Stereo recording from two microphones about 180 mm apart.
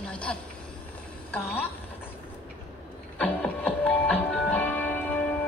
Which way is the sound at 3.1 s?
5° left (ahead or behind).